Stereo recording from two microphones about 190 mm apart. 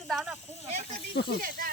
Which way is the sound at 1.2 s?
55° left (ahead or behind).